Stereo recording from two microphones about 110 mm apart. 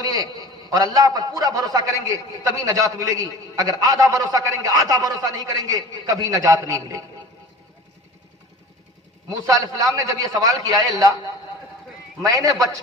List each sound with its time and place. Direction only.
0.0 s a sound: 35° right (ahead or behind)
0.4 s a man's voice: 35° right (ahead or behind)
9.3 s a man's voice: 30° right (ahead or behind)
12.2 s a man's voice: 30° right (ahead or behind)